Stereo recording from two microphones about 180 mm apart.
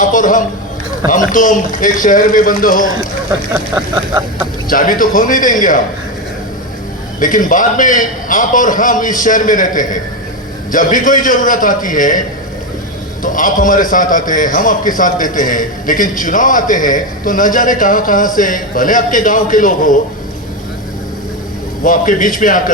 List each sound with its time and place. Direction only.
0.0 s a man's voice: 45° left (ahead or behind)
4.7 s a man's voice: 50° left (ahead or behind)
7.2 s a man's voice: 45° left (ahead or behind)
13.2 s a man's voice: 50° left (ahead or behind)
21.8 s a man's voice: 50° left (ahead or behind)